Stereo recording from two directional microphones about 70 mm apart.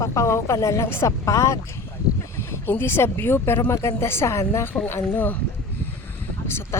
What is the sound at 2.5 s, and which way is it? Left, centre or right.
Speech, left.